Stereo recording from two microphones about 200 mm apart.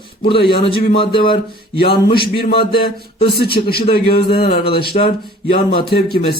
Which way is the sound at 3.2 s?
50° left (ahead or behind).